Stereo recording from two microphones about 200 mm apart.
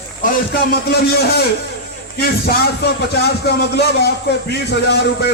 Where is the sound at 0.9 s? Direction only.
55° left (ahead or behind).